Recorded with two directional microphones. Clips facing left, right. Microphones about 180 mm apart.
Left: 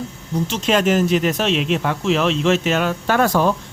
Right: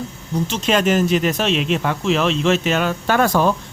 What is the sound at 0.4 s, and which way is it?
Speech, centre (ahead or behind).